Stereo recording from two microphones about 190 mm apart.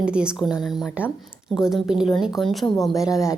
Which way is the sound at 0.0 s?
5° right (ahead or behind).